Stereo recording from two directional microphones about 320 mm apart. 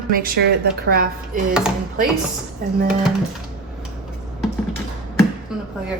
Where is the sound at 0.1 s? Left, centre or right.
Right.